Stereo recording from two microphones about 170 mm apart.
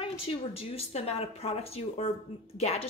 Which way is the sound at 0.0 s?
35° left (ahead or behind).